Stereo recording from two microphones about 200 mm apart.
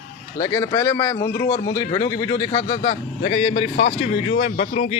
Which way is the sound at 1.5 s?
40° left (ahead or behind).